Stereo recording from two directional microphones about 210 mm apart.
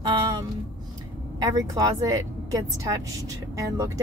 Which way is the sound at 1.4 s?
15° right (ahead or behind).